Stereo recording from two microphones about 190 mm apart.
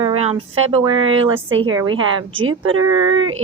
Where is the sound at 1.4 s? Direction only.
90° right.